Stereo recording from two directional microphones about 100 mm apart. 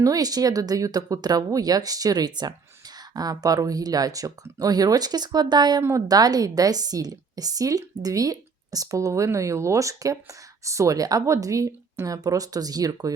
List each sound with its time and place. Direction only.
0.0 s a woman's voice: 40° right (ahead or behind)